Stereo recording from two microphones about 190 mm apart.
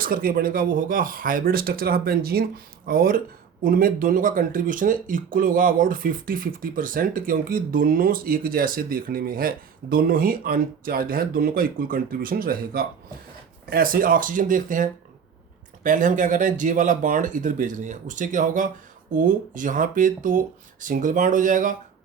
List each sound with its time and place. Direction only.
0.0 s speech: 50° right (ahead or behind)